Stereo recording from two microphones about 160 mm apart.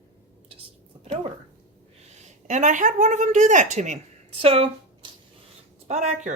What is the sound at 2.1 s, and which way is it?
Speech, 45° right (ahead or behind).